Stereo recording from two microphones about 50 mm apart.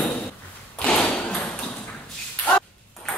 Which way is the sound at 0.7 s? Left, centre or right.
Left.